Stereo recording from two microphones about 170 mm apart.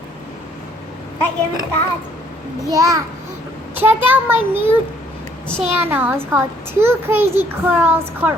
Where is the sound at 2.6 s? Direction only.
20° right (ahead or behind).